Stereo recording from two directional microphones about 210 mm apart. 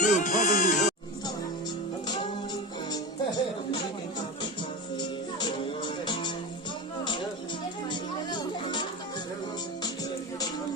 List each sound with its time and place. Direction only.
0.0 s music: 35° left (ahead or behind)
4.9 s music: 20° left (ahead or behind)
7.9 s music: 20° left (ahead or behind)